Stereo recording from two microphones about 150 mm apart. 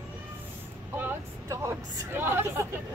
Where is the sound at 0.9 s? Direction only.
15° right (ahead or behind).